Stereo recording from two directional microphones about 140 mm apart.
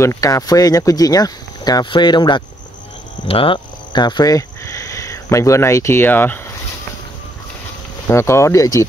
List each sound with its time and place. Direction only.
0.0 s speech: 25° left (ahead or behind)
8.1 s speech: 20° left (ahead or behind)